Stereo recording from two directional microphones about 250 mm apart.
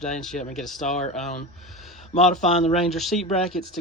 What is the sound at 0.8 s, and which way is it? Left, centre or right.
Speech, left.